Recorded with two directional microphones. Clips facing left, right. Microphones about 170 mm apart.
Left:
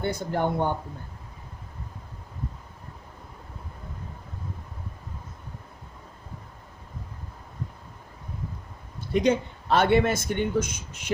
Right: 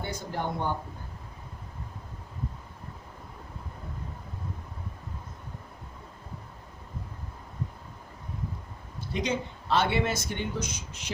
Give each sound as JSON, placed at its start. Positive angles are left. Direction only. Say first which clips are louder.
{"t": 0.0, "sound": "speech", "louder": "left 7 dB", "side_deg": 55}
{"t": 9.1, "sound": "speech", "louder": "left 8 dB", "side_deg": 55}